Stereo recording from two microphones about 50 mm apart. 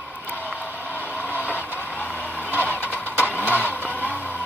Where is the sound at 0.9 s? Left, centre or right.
Left.